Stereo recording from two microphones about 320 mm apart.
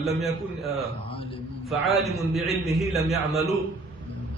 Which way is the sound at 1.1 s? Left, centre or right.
Centre.